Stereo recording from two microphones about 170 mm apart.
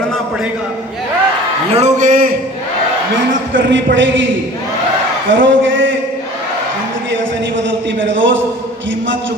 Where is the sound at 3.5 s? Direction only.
90° right.